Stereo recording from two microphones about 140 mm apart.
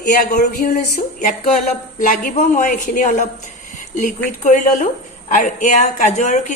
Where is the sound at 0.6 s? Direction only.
80° left.